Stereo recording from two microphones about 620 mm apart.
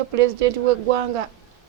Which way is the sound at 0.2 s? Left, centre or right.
Right.